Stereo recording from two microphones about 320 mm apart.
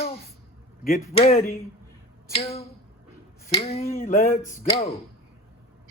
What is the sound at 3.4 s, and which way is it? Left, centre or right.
Finger snapping, centre.